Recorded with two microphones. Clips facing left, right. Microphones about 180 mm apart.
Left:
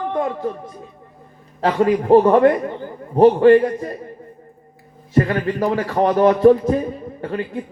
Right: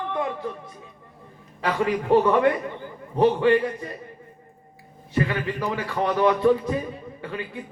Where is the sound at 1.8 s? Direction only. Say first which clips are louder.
Left 7 dB; 40° left (ahead or behind).